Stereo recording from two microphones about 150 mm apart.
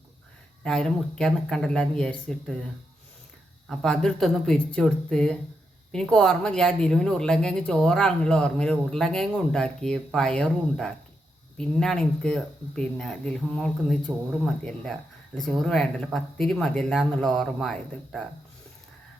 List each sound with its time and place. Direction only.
0.6 s speech: 5° left (ahead or behind)
3.7 s speech: centre (ahead or behind)